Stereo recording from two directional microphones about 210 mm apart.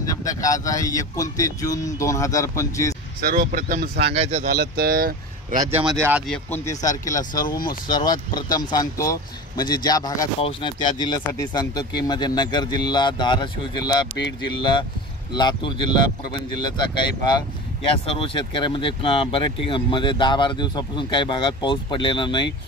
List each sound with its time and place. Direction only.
0.0 s speech: 15° left (ahead or behind)
3.2 s speech: 40° right (ahead or behind)
4.1 s speech: 30° right (ahead or behind)
4.5 s speech: 45° right (ahead or behind)
5.6 s speech: 10° right (ahead or behind)
6.2 s speech: 5° left (ahead or behind)
7.2 s speech: 40° left (ahead or behind)
7.6 s speech: 20° left (ahead or behind)
18.1 s speech: 25° left (ahead or behind)